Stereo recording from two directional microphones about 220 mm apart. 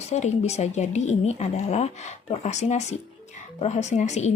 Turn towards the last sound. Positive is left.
turn(degrees=30)  # may be behind; listen again after turning